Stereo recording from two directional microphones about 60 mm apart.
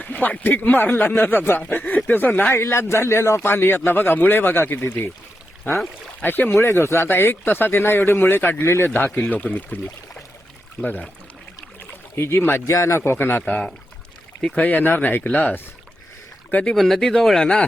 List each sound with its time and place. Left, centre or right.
0.0 s speech: left
2.5 s speech: left
3.4 s speech: left
6.2 s speech: left
6.6 s speech: left
8.9 s speech: left
12.1 s speech: left
12.6 s speech: left
13.0 s speech: left
13.4 s speech: centre
14.5 s speech: left
16.7 s speech: centre